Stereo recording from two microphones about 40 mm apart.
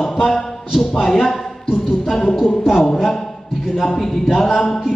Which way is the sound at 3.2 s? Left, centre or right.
Centre.